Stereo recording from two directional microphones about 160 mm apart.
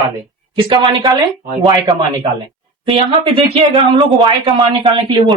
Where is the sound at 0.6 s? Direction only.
30° right (ahead or behind).